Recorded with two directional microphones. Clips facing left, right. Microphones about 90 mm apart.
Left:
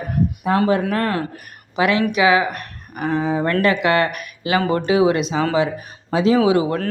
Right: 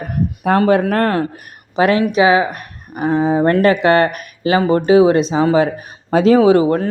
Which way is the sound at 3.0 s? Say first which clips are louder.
Right 5 dB; 20° right (ahead or behind).